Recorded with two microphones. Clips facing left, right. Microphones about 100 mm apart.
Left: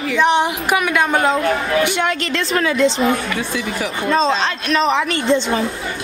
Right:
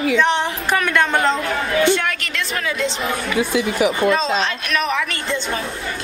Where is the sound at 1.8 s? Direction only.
20° left (ahead or behind).